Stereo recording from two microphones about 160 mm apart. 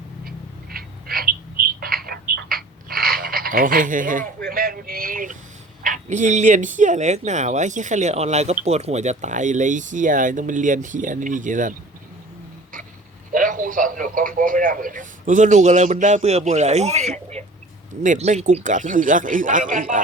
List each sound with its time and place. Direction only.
0.3 s bird: 70° right (ahead or behind)
4.4 s a sound: 65° right (ahead or behind)
6.1 s a man's voice: 50° right (ahead or behind)
13.3 s a man's voice: 55° right (ahead or behind)